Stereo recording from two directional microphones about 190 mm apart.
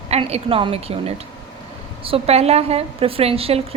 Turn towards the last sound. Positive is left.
turn(degrees=-30)  # may be behind; listen again after turning